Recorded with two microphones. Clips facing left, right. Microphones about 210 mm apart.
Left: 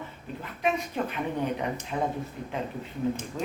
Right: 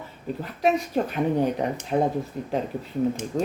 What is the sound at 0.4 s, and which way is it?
A woman's voice, 40° right (ahead or behind).